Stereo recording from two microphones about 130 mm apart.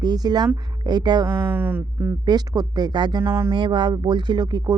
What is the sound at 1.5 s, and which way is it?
Speech, 15° right (ahead or behind).